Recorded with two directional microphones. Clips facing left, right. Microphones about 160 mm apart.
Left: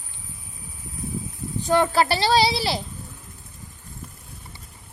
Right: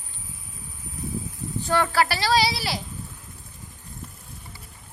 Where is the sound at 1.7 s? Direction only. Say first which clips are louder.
Left 3 dB; 20° left (ahead or behind).